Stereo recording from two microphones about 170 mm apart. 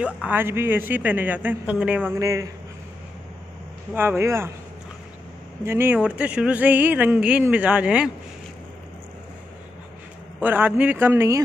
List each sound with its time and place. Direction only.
0.0 s speech: 10° right (ahead or behind)
2.1 s speech: 20° right (ahead or behind)
3.9 s speech: 15° right (ahead or behind)
5.6 s speech: 15° right (ahead or behind)
10.4 s speech: 10° right (ahead or behind)